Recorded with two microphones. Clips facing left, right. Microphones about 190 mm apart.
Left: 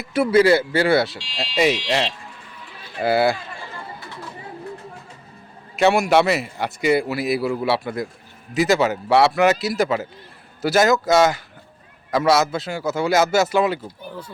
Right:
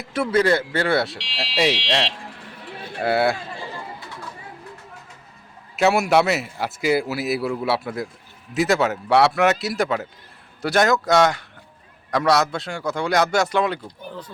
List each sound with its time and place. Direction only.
0.0 s a man's voice: 5° left (ahead or behind)
2.1 s vehicle: 60° right (ahead or behind)
3.0 s a man's voice: centre (ahead or behind)
5.7 s a man's voice: centre (ahead or behind)